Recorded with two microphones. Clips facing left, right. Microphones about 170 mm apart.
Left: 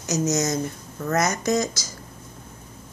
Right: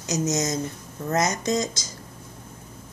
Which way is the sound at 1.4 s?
25° right (ahead or behind).